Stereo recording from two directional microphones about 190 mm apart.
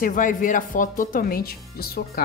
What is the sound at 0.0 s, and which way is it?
Speech, 45° left (ahead or behind).